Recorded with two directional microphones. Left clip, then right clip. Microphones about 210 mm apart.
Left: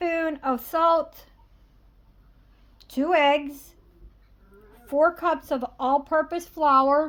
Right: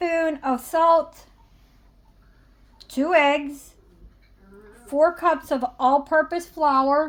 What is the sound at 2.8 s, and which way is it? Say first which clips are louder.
Speech: right 2 dB; 10° left (ahead or behind).